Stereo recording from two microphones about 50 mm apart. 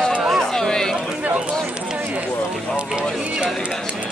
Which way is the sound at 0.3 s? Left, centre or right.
Centre.